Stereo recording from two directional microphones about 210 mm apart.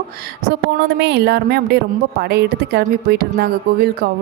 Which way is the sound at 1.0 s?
50° right (ahead or behind).